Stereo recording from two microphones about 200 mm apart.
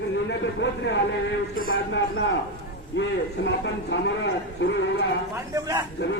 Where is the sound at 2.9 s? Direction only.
70° left (ahead or behind).